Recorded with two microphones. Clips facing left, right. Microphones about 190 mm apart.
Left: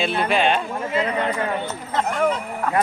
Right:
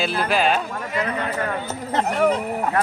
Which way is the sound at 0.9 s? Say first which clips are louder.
Left 3 dB; 25° left (ahead or behind).